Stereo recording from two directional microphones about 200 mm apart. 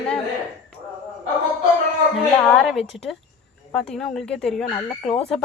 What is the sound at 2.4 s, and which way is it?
A woman's voice, 5° left (ahead or behind).